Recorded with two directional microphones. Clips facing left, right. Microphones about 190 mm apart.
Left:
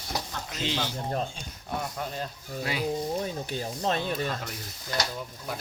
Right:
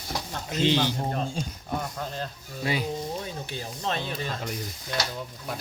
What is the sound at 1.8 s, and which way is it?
Speech, 5° left (ahead or behind).